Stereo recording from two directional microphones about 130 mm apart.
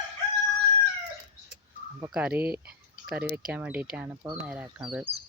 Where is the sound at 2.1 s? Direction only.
10° right (ahead or behind).